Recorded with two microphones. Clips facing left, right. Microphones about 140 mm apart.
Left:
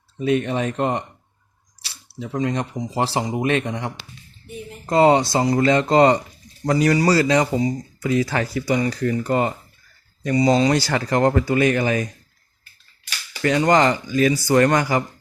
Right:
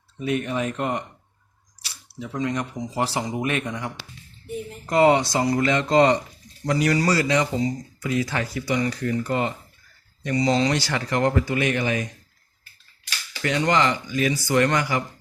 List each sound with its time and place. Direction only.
0.3 s speech: 25° left (ahead or behind)
2.1 s speech: 30° left (ahead or behind)
10.4 s speech: 20° left (ahead or behind)
10.7 s speech: 40° left (ahead or behind)
13.4 s speech: 35° left (ahead or behind)